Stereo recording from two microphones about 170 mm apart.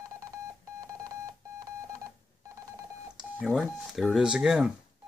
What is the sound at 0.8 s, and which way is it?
Beep, 20° right (ahead or behind).